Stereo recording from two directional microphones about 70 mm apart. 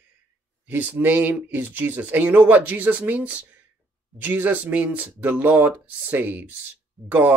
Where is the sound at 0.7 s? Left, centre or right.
Right.